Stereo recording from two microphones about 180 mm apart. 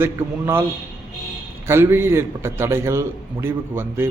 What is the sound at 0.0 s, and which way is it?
Speech, 15° right (ahead or behind).